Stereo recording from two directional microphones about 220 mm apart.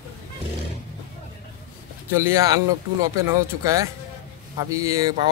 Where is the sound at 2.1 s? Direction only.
10° right (ahead or behind).